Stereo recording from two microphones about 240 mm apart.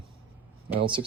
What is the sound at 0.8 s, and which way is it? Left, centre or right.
Speech, right.